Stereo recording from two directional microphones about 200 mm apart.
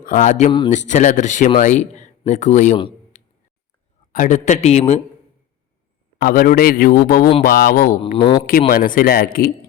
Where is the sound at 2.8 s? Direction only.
35° left (ahead or behind).